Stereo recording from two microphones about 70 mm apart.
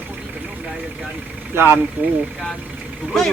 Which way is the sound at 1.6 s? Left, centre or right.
Right.